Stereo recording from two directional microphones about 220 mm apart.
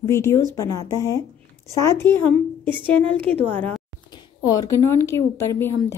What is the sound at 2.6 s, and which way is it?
Speech, 20° right (ahead or behind).